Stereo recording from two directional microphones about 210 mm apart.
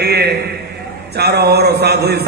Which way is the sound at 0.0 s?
50° right (ahead or behind).